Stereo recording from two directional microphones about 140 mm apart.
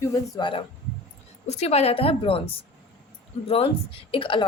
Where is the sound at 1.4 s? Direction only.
50° left (ahead or behind).